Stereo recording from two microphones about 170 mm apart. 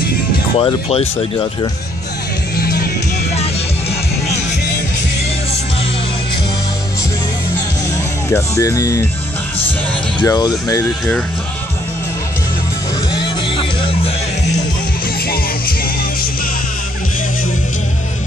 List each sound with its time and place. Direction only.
0.6 s speech: 35° left (ahead or behind)
2.5 s music: 65° left (ahead or behind)
8.3 s speech: 15° left (ahead or behind)
10.2 s speech: 20° left (ahead or behind)
13.1 s music: 30° left (ahead or behind)
15.2 s music: 60° left (ahead or behind)